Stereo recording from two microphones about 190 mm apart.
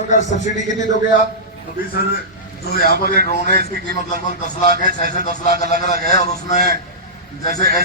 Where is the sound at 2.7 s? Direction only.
55° left (ahead or behind).